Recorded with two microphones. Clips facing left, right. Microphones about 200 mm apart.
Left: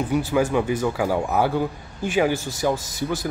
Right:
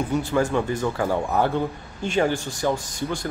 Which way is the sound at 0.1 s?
10° left (ahead or behind).